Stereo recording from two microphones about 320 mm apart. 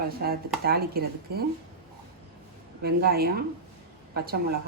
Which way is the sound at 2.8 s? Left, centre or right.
Right.